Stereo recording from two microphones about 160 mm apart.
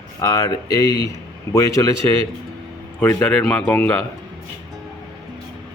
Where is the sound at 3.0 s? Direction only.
10° left (ahead or behind).